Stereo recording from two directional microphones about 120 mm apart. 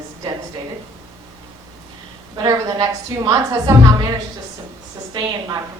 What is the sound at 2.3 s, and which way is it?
A woman's voice, 30° right (ahead or behind).